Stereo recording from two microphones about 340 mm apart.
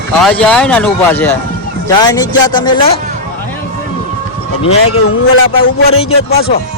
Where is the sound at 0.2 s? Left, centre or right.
Centre.